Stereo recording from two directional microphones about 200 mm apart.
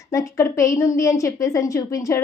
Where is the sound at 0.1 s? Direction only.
15° left (ahead or behind).